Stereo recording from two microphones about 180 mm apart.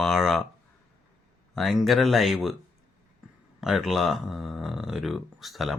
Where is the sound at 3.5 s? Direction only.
Centre (ahead or behind).